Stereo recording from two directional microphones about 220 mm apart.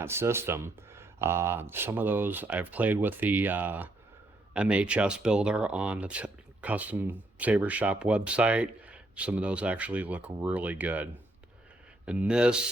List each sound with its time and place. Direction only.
0.0 s speech: 10° right (ahead or behind)